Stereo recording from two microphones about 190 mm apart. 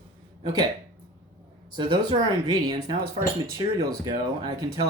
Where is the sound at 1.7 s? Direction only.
25° right (ahead or behind).